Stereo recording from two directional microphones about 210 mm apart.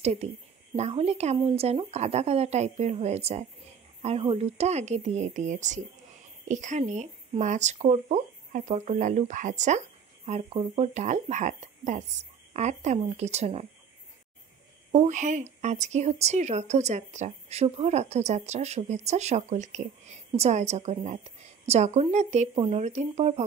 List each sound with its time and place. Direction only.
0.0 s a woman's voice: 30° right (ahead or behind)
15.0 s speech: 35° right (ahead or behind)